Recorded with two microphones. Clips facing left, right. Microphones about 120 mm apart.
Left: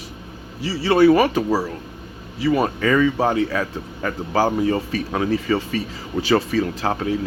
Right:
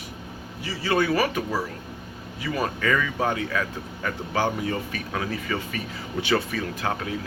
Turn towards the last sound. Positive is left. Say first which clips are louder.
# left 6 dB
turn(degrees=35)  # may be behind; listen again after turning